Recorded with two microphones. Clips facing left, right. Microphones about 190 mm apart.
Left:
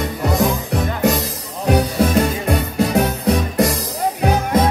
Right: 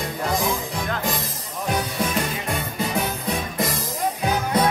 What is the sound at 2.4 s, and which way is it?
Music, 70° left (ahead or behind).